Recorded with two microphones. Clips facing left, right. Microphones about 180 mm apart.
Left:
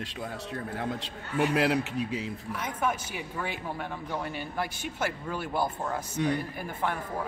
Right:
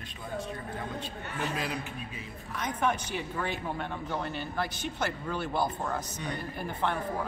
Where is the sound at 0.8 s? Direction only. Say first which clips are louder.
Left 3 dB; 70° left (ahead or behind).